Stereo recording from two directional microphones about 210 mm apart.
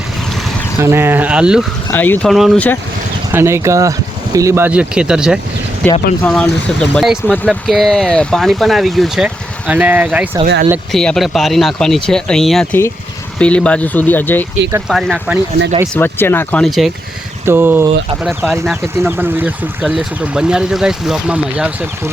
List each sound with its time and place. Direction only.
0.8 s speech: 10° right (ahead or behind)
1.9 s speech: 10° left (ahead or behind)
3.3 s speech: 15° right (ahead or behind)
10.4 s speech: 45° right (ahead or behind)
10.9 s speech: centre (ahead or behind)
16.0 s speech: 10° left (ahead or behind); by 22.1 s 5° right (ahead or behind)